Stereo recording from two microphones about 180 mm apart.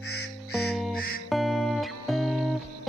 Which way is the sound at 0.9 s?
55° left (ahead or behind).